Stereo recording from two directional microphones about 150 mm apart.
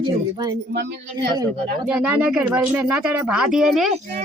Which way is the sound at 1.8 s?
10° right (ahead or behind).